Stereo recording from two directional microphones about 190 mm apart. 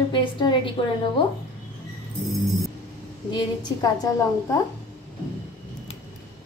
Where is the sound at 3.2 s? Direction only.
25° left (ahead or behind).